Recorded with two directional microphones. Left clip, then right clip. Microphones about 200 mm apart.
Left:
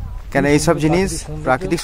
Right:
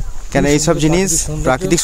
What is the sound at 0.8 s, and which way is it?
Speech, 20° right (ahead or behind).